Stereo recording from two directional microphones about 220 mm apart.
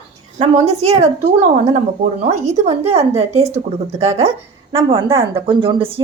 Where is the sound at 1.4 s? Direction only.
25° right (ahead or behind).